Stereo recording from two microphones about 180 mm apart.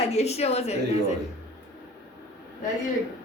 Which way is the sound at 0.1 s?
35° left (ahead or behind).